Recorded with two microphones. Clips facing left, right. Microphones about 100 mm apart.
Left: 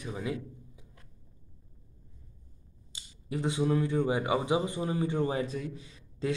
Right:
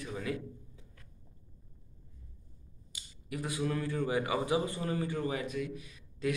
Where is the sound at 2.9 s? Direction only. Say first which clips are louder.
Left 4 dB; 25° left (ahead or behind).